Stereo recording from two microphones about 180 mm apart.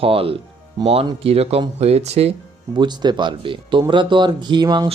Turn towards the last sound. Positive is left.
turn(degrees=-25)  # may be behind; listen again after turning